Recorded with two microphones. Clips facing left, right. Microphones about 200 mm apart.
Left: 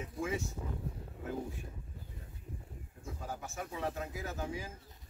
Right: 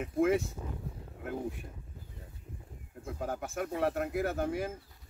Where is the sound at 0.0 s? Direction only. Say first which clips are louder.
Right 10 dB; 60° right (ahead or behind).